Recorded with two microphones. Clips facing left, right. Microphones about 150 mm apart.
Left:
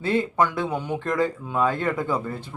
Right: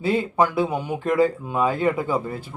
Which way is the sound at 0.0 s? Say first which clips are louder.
Right 2 dB; 10° right (ahead or behind).